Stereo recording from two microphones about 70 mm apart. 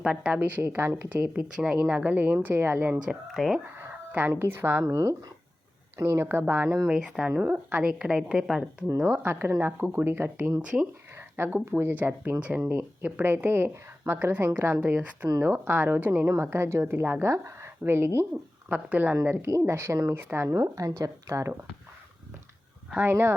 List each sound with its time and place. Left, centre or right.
0.0 s a woman's voice: centre
0.3 s speech: right
0.8 s a woman's voice: right
1.1 s speech: centre; by 3.0 s right
3.3 s speech: centre
4.3 s a woman's voice: right
6.0 s a woman's voice: right
6.4 s speech: right
6.8 s a woman's voice: centre
9.1 s a woman's voice: right
18.7 s a woman's voice: right
19.5 s a woman's voice: right
20.5 s a woman's voice: right
23.0 s a woman's voice: right